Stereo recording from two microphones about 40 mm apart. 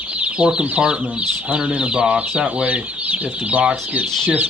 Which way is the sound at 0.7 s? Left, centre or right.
Right.